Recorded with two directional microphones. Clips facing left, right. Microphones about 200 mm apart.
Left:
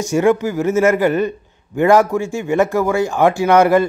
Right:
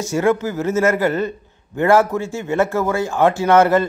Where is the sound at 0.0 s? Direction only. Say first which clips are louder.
Left 3 dB; 15° left (ahead or behind).